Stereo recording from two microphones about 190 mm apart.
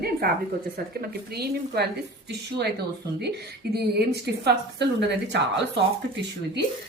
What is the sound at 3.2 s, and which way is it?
Speech, 60° right (ahead or behind).